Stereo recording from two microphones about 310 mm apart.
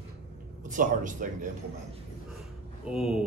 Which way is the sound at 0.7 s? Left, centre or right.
Right.